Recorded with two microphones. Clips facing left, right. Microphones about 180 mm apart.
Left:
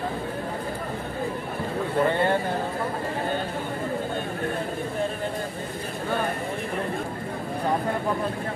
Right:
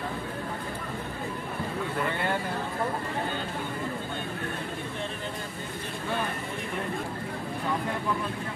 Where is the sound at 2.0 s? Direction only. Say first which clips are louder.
Left 8 dB; 35° left (ahead or behind).